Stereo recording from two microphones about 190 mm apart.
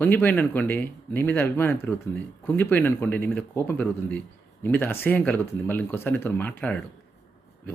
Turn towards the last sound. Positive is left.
turn(degrees=10)  # may be behind; listen again after turning